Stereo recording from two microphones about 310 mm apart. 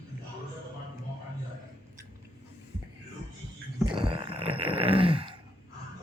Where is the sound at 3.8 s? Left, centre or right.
Centre.